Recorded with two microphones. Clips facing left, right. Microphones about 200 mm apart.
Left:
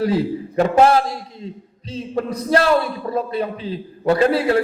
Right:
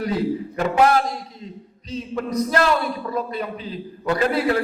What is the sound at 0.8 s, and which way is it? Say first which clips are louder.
A man's voice: left 2 dB; 30° left (ahead or behind).